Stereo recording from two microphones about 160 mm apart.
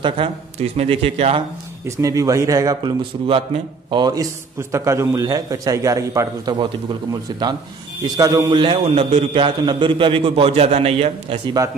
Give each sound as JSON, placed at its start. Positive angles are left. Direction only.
{"t": 0.0, "sound": "a man's voice", "side_deg": -40}
{"t": 1.9, "sound": "a man's voice", "side_deg": -20}
{"t": 4.0, "sound": "a man's voice", "side_deg": -20}
{"t": 8.0, "sound": "a man's voice", "side_deg": -20}